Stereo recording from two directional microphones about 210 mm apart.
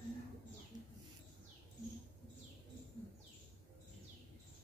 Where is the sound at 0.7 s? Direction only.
20° right (ahead or behind).